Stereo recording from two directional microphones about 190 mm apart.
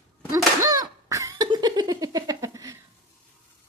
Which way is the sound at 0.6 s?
20° right (ahead or behind).